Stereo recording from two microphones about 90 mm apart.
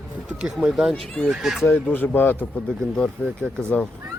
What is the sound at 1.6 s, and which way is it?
Speech, 20° left (ahead or behind).